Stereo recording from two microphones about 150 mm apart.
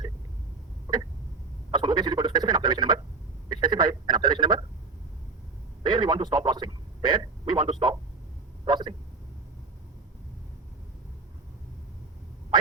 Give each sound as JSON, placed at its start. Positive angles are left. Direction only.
{"t": 1.7, "sound": "speech", "side_deg": -30}
{"t": 3.5, "sound": "a sound", "side_deg": -30}
{"t": 5.8, "sound": "a man's voice", "side_deg": -30}